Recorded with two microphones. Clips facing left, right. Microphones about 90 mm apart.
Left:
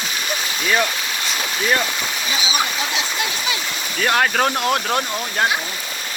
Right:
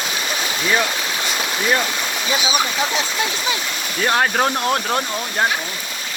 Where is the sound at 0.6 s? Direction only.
10° right (ahead or behind).